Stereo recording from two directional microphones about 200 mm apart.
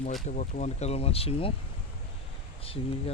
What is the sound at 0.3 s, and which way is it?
Speech, 35° left (ahead or behind).